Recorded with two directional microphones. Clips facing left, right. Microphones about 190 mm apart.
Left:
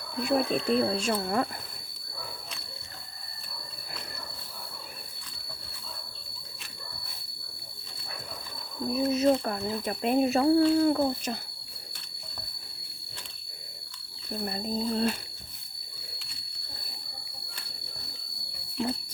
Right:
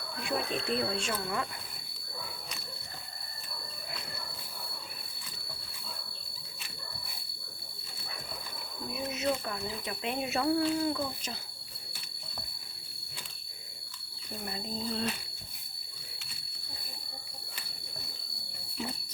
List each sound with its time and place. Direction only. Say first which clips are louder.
0.2 s speech: left 8 dB; 40° left (ahead or behind)
8.9 s speech: left 9 dB; 35° left (ahead or behind)
9.4 s speech: left 7 dB; 45° left (ahead or behind)
10.8 s speech: left 8 dB; 50° left (ahead or behind)
14.4 s speech: left 6 dB; 45° left (ahead or behind)